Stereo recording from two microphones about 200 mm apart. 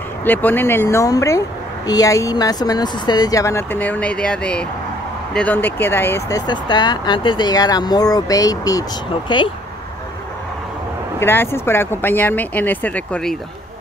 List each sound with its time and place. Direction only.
0.2 s speech: 10° left (ahead or behind)
11.1 s speech: 10° left (ahead or behind)